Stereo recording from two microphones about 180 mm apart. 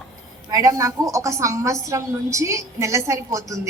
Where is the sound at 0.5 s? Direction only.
20° right (ahead or behind).